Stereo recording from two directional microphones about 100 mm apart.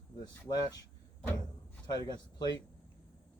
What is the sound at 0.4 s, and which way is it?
Speech, 40° left (ahead or behind).